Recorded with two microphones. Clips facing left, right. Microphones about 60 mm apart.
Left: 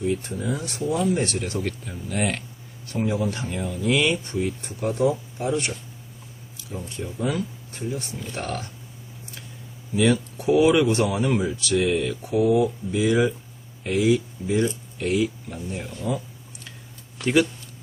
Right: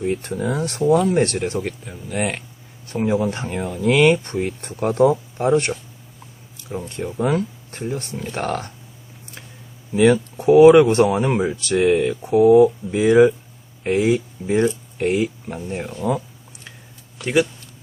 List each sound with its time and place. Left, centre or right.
0.0 s speech: right
1.5 s speech: right
1.9 s speech: centre
2.8 s speech: right
6.7 s speech: right
9.9 s speech: right